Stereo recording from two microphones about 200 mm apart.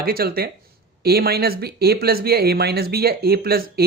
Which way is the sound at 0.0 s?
50° right (ahead or behind).